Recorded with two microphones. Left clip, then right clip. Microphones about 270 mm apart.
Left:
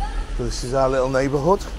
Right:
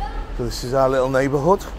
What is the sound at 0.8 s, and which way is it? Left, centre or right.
Speech, right.